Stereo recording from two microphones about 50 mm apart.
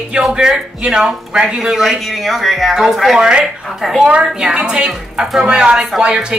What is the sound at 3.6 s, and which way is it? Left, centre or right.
Speech, centre.